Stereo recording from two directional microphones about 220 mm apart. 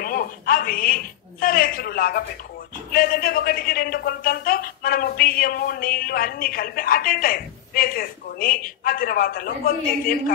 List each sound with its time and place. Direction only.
0.0 s a woman's voice: 40° left (ahead or behind)